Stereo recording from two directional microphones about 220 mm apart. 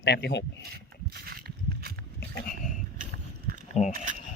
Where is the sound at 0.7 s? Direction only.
45° right (ahead or behind).